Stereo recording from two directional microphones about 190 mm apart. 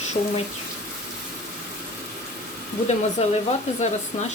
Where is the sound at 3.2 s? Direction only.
35° left (ahead or behind).